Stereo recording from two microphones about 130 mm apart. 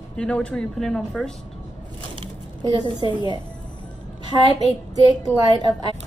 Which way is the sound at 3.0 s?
35° left (ahead or behind).